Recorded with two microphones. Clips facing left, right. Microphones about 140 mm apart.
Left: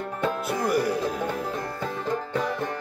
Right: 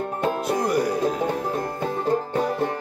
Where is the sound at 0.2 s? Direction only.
45° right (ahead or behind).